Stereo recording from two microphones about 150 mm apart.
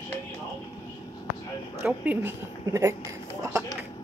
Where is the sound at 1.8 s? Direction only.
10° right (ahead or behind).